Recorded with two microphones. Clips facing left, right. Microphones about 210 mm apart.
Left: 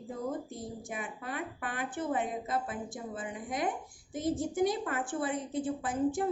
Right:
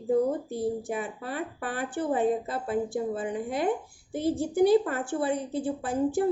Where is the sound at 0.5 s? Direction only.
65° right (ahead or behind).